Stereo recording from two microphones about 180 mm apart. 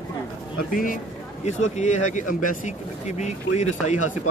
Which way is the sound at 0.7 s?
50° left (ahead or behind).